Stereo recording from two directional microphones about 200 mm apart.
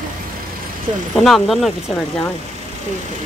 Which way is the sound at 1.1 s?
Centre (ahead or behind).